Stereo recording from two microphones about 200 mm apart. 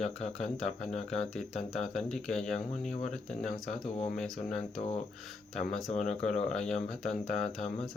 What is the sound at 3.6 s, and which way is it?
Mantra, 35° left (ahead or behind).